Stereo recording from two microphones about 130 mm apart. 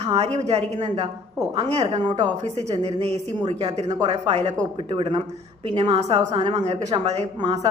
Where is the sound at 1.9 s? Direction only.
35° right (ahead or behind).